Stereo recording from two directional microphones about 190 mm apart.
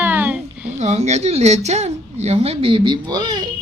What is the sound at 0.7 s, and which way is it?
A woman's voice, 35° right (ahead or behind).